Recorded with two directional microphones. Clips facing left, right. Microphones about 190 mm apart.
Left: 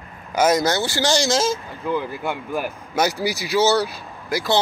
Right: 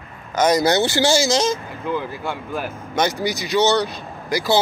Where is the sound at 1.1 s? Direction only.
Centre (ahead or behind).